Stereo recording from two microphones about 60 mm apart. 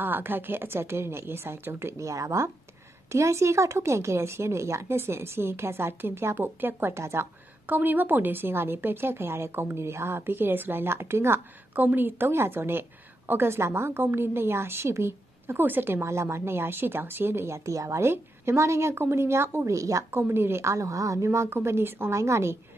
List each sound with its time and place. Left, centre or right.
0.0 s a woman's voice: right
2.0 s speech: right
7.6 s a woman's voice: right
11.7 s a woman's voice: right
16.0 s speech: right
17.7 s speech: right
18.0 s speech: right
19.7 s a woman's voice: right
20.1 s speech: right